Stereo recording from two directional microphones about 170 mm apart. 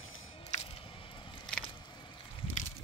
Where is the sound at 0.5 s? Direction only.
45° left (ahead or behind).